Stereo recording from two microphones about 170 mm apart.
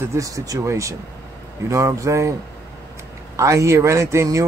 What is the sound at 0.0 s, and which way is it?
Speech, 15° right (ahead or behind).